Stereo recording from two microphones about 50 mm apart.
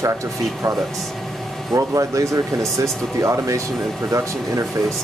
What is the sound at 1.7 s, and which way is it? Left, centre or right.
Speech, right.